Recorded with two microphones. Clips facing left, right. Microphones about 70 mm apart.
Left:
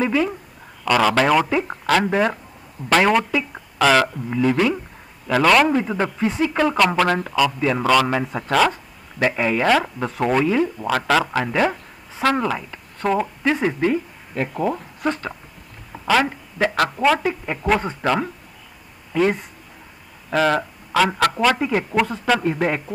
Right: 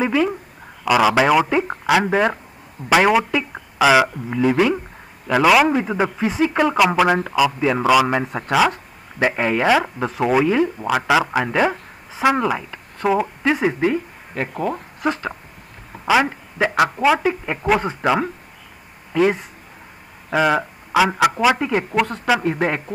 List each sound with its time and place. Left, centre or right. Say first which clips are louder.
0.0 s speech: right 1 dB; centre
9.2 s speech: right 1 dB; right
9.7 s speech: right 1 dB; centre
13.0 s speech: right 2 dB; centre
14.5 s speech: left 1 dB; centre
17.2 s speech: right 3 dB; right
17.6 s speech: right 2 dB; centre
21.9 s speech: even; centre
22.4 s speech: even; centre